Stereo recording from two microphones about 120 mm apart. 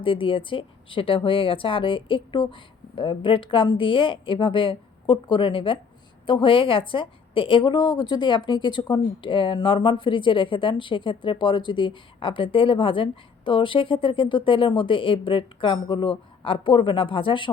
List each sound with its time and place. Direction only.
0.0 s a woman's voice: 45° left (ahead or behind)